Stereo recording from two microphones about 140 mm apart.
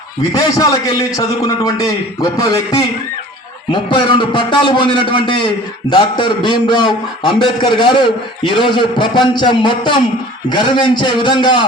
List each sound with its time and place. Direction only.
0.3 s a man's voice: 25° left (ahead or behind)